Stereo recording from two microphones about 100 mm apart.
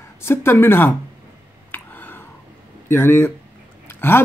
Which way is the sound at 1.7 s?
20° left (ahead or behind).